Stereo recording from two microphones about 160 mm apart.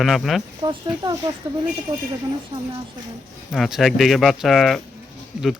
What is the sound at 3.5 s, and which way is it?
Speech, centre (ahead or behind).